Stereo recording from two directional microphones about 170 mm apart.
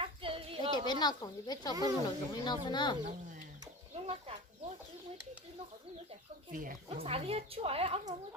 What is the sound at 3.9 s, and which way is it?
Chicken, 35° right (ahead or behind).